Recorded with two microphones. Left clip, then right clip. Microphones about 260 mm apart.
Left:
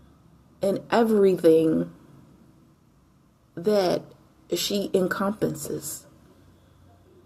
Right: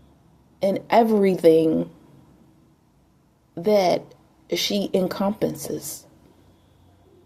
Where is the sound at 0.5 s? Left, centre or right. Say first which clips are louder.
Right 4 dB; right.